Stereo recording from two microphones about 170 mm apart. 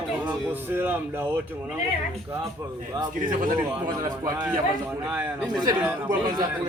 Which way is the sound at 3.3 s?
50° right (ahead or behind).